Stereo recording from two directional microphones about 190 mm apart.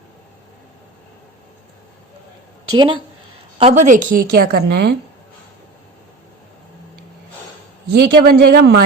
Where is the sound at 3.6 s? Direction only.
35° right (ahead or behind); by 4.9 s 55° right (ahead or behind).